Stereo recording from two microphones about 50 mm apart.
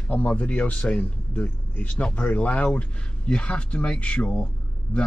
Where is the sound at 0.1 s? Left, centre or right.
Left.